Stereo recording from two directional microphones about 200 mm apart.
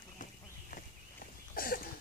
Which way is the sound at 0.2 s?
45° left (ahead or behind).